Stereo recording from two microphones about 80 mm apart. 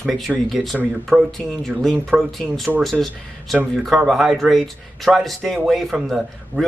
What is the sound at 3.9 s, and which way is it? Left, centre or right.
Speech, centre.